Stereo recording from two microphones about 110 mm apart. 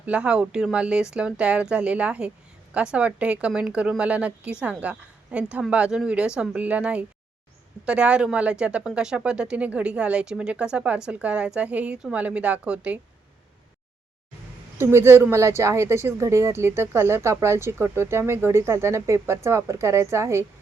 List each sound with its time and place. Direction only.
0.0 s speech: 10° right (ahead or behind)
14.8 s speech: 25° right (ahead or behind)